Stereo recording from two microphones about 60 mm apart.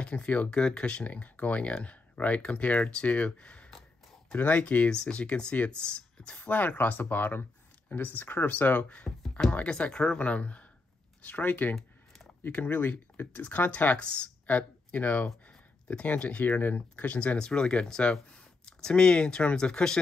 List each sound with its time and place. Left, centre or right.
0.0 s speech: left
9.1 s speech: centre
9.5 s speech: left